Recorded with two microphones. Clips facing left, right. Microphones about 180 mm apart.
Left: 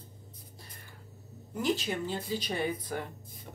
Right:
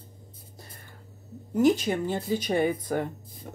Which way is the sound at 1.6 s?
45° right (ahead or behind).